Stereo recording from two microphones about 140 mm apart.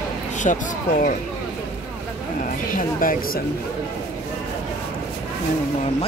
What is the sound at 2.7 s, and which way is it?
Speech, 80° left.